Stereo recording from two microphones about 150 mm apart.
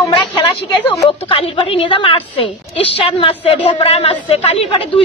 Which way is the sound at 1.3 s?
40° left (ahead or behind).